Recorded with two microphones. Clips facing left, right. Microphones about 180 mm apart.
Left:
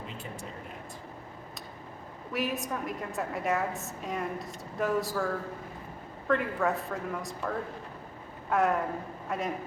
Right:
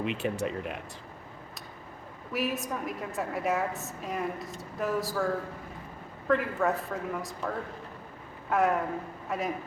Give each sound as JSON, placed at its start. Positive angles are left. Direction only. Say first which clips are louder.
{"t": 0.0, "sound": "speech", "louder": "right 11 dB", "side_deg": -75}
{"t": 2.3, "sound": "a woman's voice", "louder": "right 1 dB", "side_deg": 0}